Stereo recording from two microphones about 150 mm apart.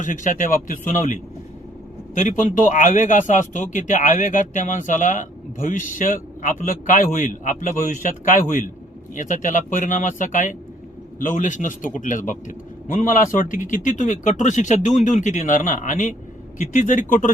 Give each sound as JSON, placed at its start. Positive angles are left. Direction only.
{"t": 0.0, "sound": "a man's voice", "side_deg": 60}